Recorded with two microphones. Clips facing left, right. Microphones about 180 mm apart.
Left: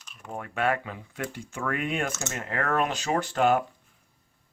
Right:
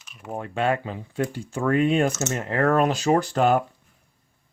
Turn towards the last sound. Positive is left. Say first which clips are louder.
# right 4 dB
turn(degrees=-40)  # may be behind; listen again after turning